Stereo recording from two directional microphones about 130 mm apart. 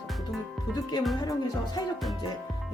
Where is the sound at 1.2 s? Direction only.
30° left (ahead or behind).